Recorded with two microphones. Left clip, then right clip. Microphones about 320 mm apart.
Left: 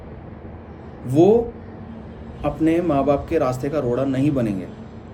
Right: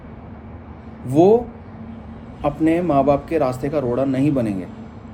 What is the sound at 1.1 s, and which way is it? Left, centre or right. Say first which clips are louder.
Speech: right 1 dB; centre.